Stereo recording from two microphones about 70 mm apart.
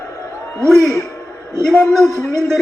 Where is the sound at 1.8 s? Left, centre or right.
Centre.